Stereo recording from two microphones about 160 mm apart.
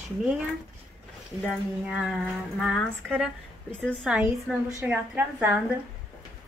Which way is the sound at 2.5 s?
Centre (ahead or behind).